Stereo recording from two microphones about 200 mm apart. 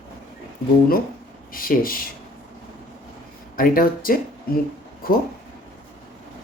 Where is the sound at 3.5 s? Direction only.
45° left (ahead or behind).